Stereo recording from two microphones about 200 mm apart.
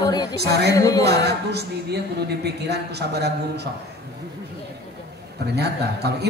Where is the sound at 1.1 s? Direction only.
55° right (ahead or behind).